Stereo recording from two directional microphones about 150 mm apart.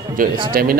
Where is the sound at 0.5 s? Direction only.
80° right.